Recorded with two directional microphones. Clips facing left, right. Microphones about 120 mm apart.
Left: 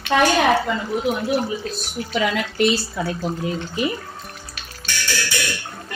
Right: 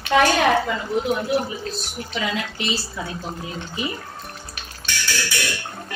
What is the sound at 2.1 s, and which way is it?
Speech, 55° left (ahead or behind).